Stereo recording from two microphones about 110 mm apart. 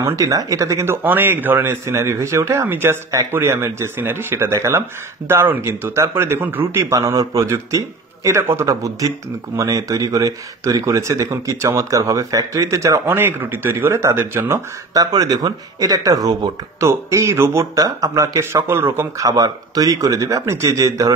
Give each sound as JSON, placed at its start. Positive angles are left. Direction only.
{"t": 0.0, "sound": "a man's voice", "side_deg": -30}